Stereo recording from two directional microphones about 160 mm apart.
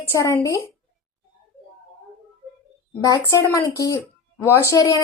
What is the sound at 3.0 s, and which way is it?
A woman's voice, 20° left (ahead or behind).